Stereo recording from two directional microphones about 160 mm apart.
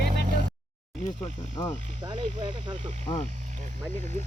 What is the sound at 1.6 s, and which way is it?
Speech, 20° left (ahead or behind).